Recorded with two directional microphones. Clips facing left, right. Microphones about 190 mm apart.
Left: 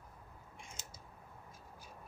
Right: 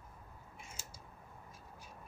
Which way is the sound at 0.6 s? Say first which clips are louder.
Even; 5° right (ahead or behind).